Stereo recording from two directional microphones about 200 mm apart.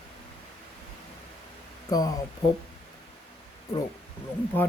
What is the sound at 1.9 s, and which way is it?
Speech, 20° left (ahead or behind).